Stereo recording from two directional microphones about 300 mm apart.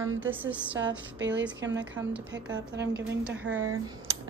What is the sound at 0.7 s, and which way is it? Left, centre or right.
A woman's voice, right.